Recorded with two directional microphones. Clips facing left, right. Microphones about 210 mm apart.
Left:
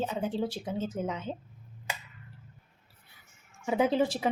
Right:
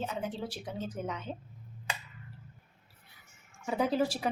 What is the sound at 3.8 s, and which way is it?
Speech, 20° left (ahead or behind).